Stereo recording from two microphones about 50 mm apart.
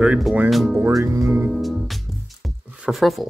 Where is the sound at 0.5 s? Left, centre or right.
Centre.